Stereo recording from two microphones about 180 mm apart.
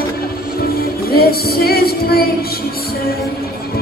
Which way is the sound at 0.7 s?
60° left (ahead or behind).